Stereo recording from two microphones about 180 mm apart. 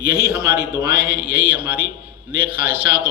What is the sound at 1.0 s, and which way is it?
Mantra, 55° right (ahead or behind).